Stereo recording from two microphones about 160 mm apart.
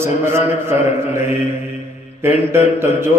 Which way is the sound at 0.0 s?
15° right (ahead or behind).